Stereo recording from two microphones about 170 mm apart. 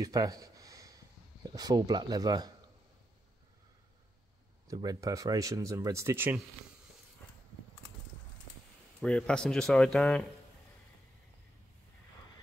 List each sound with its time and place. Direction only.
0.0 s speech: 20° right (ahead or behind)
4.6 s speech: 20° right (ahead or behind)
9.0 s speech: 5° left (ahead or behind)